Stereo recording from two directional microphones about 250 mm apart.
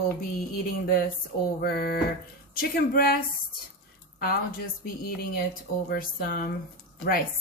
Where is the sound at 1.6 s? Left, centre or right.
Left.